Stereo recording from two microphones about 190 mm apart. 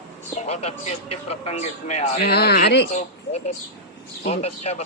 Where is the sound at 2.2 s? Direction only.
60° left (ahead or behind).